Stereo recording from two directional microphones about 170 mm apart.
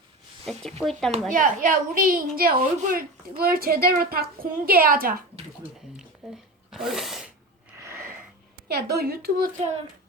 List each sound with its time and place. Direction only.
0.4 s speech: centre (ahead or behind)
1.3 s a child's voice: 50° right (ahead or behind)
6.2 s a sound: centre (ahead or behind)
6.7 s sneeze: centre (ahead or behind)
7.8 s a sound: 15° right (ahead or behind)
8.6 s a woman's voice: 70° right (ahead or behind)
9.6 s child singing: 40° right (ahead or behind)